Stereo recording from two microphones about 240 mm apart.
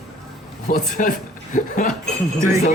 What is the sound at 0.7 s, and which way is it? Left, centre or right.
Chuckle, left.